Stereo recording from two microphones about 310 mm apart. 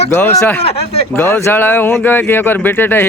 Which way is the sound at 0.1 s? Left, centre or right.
Centre.